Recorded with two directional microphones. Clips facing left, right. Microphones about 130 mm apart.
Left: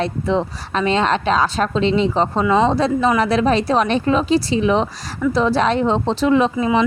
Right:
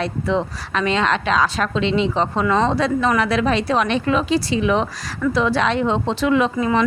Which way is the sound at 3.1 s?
35° left (ahead or behind).